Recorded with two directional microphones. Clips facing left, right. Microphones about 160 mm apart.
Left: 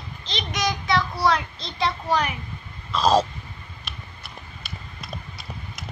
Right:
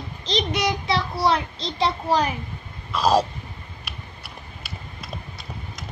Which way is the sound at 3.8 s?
5° right (ahead or behind).